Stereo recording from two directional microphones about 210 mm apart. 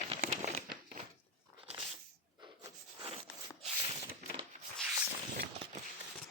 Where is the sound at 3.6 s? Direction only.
30° right (ahead or behind).